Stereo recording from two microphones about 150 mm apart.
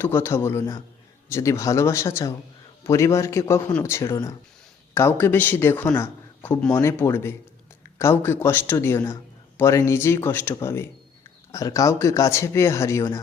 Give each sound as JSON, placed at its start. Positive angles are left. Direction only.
{"t": 0.0, "sound": "a man's voice", "side_deg": 15}